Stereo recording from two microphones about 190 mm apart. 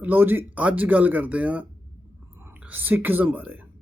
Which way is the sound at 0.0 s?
10° right (ahead or behind).